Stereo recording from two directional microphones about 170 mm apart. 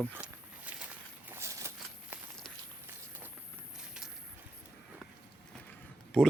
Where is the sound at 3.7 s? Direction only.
5° right (ahead or behind).